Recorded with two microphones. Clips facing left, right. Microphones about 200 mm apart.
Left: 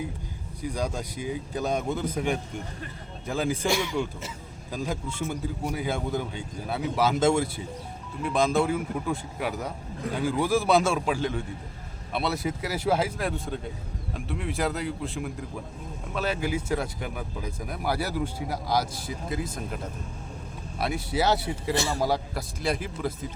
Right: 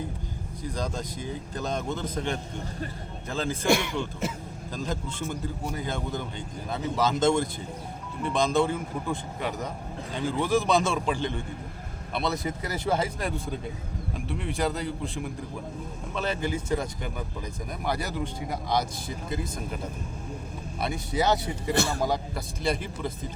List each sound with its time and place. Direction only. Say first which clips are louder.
0.6 s a man's voice: left 2 dB; 10° left (ahead or behind)
3.7 s speech: right 3 dB; 60° right (ahead or behind)
4.7 s a man's voice: left 1 dB; 10° left (ahead or behind)